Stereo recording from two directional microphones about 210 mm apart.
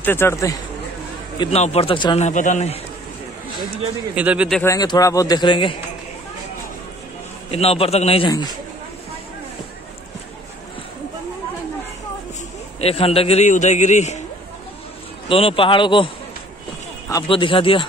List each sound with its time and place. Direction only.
0.0 s a man's voice: 10° left (ahead or behind)
1.4 s speech: 30° left (ahead or behind)
2.2 s a man's voice: 35° left (ahead or behind)
4.1 s a man's voice: 5° right (ahead or behind)
4.6 s a man's voice: 15° left (ahead or behind)
7.5 s speech: 30° left (ahead or behind)
12.8 s a man's voice: 30° left (ahead or behind)
15.2 s speech: 25° left (ahead or behind)
17.1 s speech: 25° left (ahead or behind)